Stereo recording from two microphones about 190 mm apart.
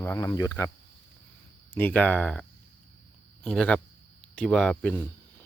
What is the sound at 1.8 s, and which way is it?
Speech, 10° left (ahead or behind).